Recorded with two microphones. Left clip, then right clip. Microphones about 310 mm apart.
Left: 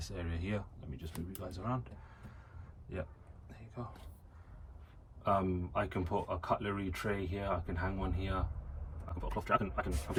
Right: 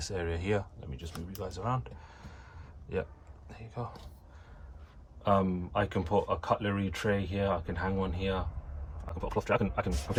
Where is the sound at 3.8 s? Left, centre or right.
Right.